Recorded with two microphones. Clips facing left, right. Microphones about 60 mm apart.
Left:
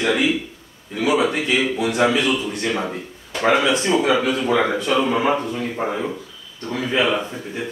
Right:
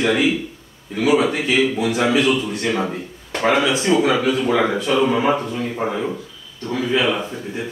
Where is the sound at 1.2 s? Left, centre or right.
Centre.